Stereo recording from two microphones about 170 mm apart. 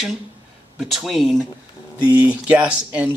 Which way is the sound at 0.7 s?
Centre (ahead or behind).